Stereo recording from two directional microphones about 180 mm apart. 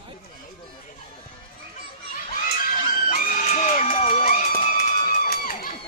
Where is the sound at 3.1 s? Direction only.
45° left (ahead or behind).